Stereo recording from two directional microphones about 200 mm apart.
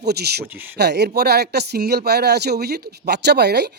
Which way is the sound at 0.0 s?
55° right (ahead or behind).